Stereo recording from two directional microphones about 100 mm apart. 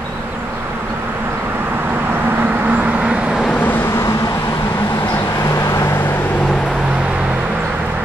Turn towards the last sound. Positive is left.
turn(degrees=-10)  # may be behind; listen again after turning